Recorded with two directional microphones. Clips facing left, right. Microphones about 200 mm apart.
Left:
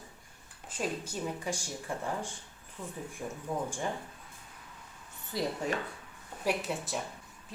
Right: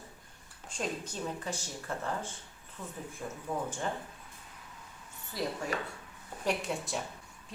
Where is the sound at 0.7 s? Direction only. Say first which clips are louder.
Left 2 dB; 10° left (ahead or behind).